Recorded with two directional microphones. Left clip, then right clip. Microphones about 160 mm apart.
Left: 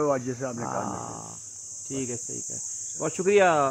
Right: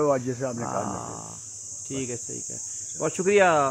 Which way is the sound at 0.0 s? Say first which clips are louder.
Right 2 dB; 25° right (ahead or behind).